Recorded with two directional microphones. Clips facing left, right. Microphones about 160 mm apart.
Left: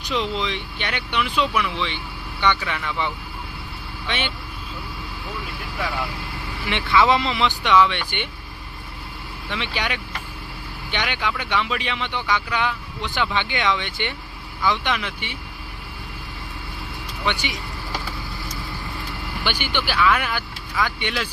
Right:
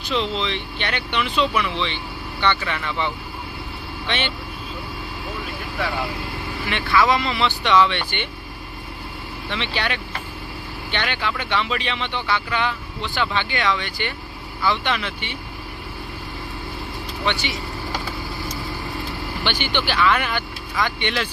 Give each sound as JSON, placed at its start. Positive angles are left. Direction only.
{"t": 0.0, "sound": "speech", "side_deg": 15}
{"t": 6.7, "sound": "speech", "side_deg": 20}
{"t": 9.5, "sound": "speech", "side_deg": 10}
{"t": 17.2, "sound": "speech", "side_deg": 10}
{"t": 19.5, "sound": "speech", "side_deg": 10}